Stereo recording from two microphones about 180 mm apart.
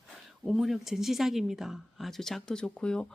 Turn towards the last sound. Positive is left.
turn(degrees=5)  # may be behind; listen again after turning